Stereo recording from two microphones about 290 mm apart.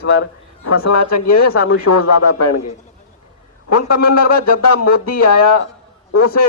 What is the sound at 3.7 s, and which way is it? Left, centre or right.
Speech, left.